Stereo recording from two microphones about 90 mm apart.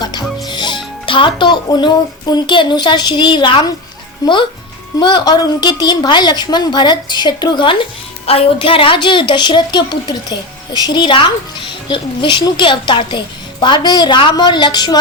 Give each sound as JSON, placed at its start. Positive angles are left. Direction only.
{"t": 0.0, "sound": "music", "side_deg": 50}
{"t": 1.0, "sound": "speech", "side_deg": 70}
{"t": 1.6, "sound": "a woman's voice", "side_deg": 50}
{"t": 4.9, "sound": "a woman's voice", "side_deg": 55}
{"t": 8.3, "sound": "a woman's voice", "side_deg": 80}